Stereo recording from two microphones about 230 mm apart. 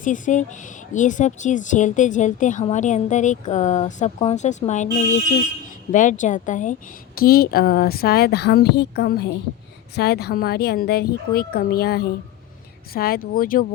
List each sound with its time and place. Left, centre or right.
0.0 s a woman's voice: left